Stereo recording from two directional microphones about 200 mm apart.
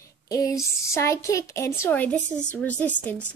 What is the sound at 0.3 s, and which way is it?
A woman's voice, 15° left (ahead or behind).